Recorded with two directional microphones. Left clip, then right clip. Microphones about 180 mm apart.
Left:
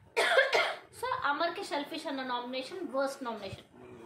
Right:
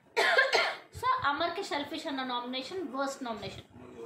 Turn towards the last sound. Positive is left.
turn(degrees=5)  # may be behind; listen again after turning